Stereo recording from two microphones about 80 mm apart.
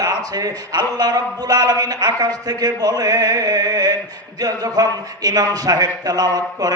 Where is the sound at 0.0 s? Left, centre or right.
Right.